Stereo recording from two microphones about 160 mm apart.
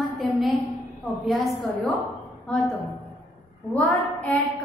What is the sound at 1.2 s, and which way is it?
A woman's voice, centre (ahead or behind).